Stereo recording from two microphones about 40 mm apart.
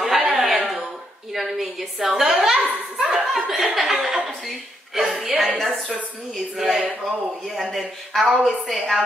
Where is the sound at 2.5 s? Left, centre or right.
Right.